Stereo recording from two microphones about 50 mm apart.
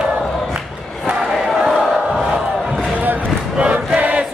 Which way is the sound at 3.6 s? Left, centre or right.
Right.